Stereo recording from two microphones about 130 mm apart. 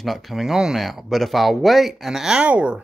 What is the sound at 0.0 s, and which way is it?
Speech, centre (ahead or behind).